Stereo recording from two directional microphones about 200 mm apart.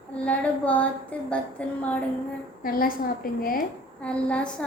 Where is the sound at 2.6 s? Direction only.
45° left (ahead or behind).